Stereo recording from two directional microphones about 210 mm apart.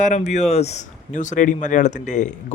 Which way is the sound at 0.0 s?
35° left (ahead or behind).